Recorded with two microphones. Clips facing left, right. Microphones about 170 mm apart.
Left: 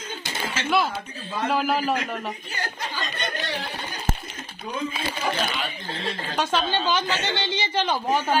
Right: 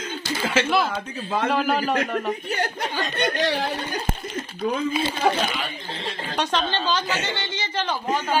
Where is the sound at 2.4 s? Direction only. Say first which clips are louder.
Right 6 dB; 65° right (ahead or behind).